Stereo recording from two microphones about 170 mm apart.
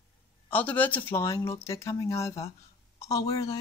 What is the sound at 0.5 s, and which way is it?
Speech, 10° left (ahead or behind).